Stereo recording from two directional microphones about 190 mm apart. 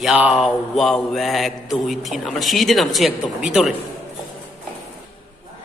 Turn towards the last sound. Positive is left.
turn(degrees=0)  # may be behind; listen again after turning